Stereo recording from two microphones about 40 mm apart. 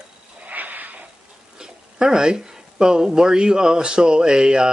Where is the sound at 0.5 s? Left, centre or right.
Right.